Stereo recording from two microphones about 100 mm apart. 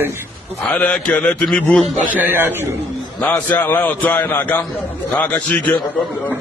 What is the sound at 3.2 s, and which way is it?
A man's voice, 15° left (ahead or behind).